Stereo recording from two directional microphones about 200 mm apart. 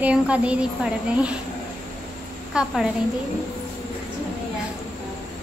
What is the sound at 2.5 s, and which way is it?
Speech, 5° right (ahead or behind).